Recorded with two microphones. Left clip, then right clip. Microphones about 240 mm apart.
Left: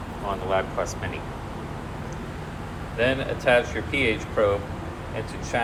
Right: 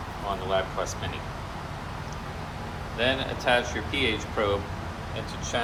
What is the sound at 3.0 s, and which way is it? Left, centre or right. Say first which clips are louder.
Speech: left 3 dB; centre.